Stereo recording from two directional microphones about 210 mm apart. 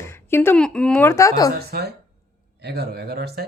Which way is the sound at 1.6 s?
50° right (ahead or behind).